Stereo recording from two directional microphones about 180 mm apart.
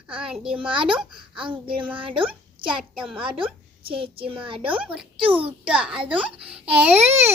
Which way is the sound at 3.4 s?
30° right (ahead or behind).